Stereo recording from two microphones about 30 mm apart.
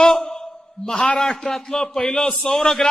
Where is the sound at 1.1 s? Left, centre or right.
Left.